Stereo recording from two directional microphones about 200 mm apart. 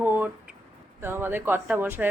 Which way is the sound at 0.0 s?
10° right (ahead or behind).